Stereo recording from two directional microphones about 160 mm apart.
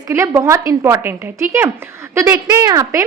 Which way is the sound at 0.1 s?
15° right (ahead or behind).